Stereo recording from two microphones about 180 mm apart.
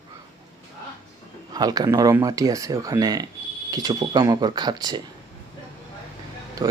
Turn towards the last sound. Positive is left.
turn(degrees=-20)  # may be behind; listen again after turning